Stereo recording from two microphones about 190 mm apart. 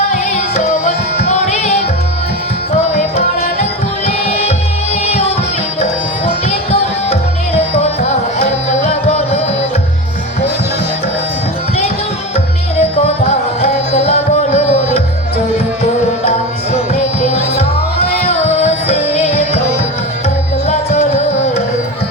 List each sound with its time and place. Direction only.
0.3 s music: 35° left (ahead or behind)
4.0 s music: 35° left (ahead or behind)
7.7 s music: 35° left (ahead or behind)
13.6 s music: 35° left (ahead or behind)
16.9 s music: 35° left (ahead or behind)
20.7 s music: 35° left (ahead or behind)